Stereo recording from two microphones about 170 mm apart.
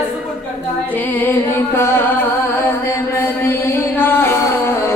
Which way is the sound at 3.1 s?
15° left (ahead or behind).